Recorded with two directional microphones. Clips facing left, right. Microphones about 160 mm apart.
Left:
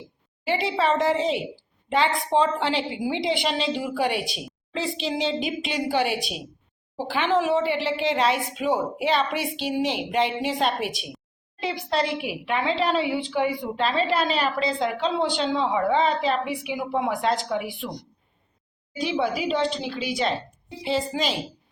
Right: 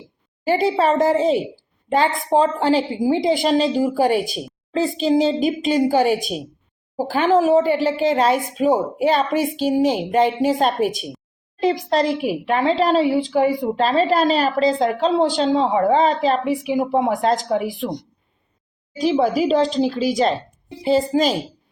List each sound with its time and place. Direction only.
0.4 s a woman's voice: 45° right (ahead or behind)
18.9 s a woman's voice: 40° right (ahead or behind)